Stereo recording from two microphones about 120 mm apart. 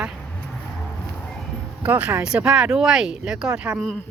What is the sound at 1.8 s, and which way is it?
Speech, 10° right (ahead or behind).